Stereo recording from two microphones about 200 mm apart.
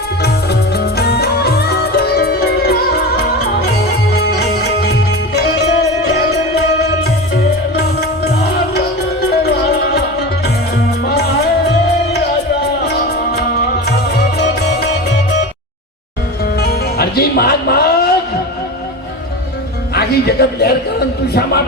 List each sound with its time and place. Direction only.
0.7 s music: 55° left (ahead or behind)
11.0 s music: 55° left (ahead or behind)
12.8 s music: 55° left (ahead or behind)
16.6 s music: 50° left (ahead or behind)
19.9 s music: 50° left (ahead or behind)